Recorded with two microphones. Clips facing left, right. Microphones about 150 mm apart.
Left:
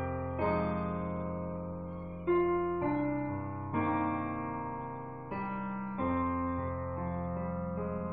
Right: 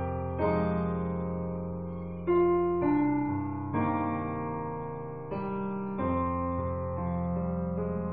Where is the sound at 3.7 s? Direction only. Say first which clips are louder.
Right 1 dB; centre (ahead or behind).